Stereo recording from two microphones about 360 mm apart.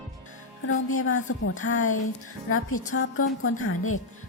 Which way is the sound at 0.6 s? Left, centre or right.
Left.